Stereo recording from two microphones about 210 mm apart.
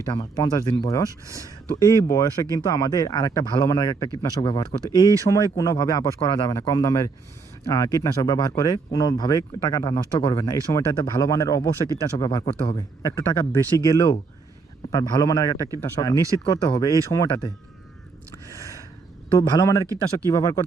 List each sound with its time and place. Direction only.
0.1 s speech: 20° left (ahead or behind)
16.1 s speech: 15° right (ahead or behind)
16.4 s speech: 15° left (ahead or behind)
18.5 s a sound: 15° left (ahead or behind)
19.4 s speech: 15° left (ahead or behind)